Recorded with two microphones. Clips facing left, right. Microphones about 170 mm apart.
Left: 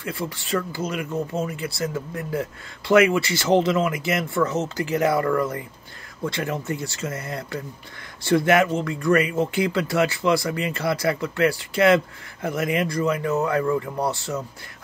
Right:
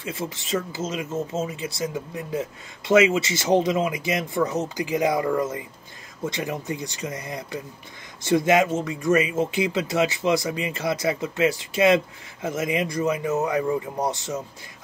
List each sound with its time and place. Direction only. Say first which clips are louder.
0.0 s speech: left 1 dB; 20° right (ahead or behind)